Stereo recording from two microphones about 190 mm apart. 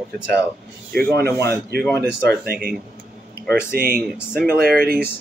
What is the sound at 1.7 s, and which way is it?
Speech, 60° right (ahead or behind).